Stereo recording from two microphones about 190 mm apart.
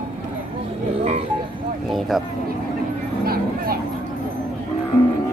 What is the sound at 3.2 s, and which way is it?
Vehicle, 50° right (ahead or behind).